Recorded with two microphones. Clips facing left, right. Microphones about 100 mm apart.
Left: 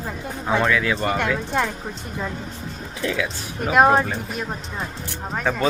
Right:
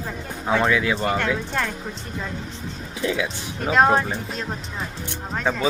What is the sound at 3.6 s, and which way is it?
A child's voice, 10° left (ahead or behind).